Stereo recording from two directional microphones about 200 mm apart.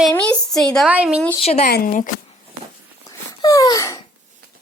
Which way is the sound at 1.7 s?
45° left (ahead or behind).